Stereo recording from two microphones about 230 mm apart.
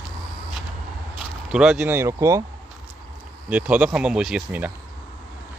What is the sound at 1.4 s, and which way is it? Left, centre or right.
Speech, centre.